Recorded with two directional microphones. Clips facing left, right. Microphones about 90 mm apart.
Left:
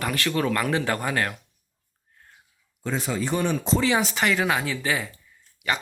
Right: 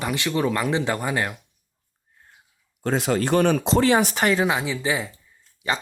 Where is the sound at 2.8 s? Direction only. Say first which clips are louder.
Right 5 dB; 70° right (ahead or behind); by 4.4 s 40° right (ahead or behind).